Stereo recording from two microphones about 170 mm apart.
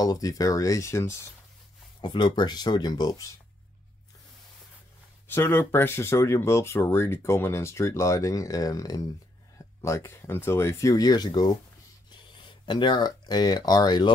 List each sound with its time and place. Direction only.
0.0 s speech: 20° left (ahead or behind)
2.0 s speech: 30° left (ahead or behind)
5.3 s speech: 10° left (ahead or behind)